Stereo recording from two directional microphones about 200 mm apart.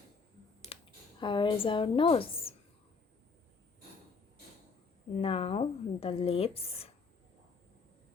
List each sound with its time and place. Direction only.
0.7 s a sound: 30° left (ahead or behind)
1.2 s speech: 25° left (ahead or behind)
5.2 s speech: 30° left (ahead or behind)